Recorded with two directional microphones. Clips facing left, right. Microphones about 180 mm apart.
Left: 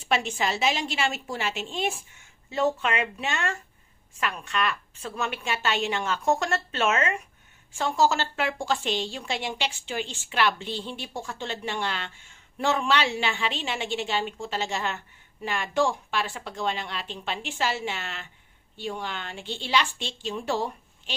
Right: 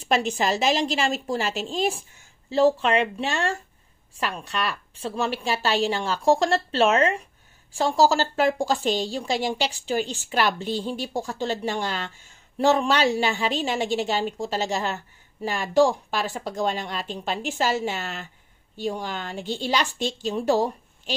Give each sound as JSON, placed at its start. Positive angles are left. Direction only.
{"t": 0.0, "sound": "a woman's voice", "side_deg": -35}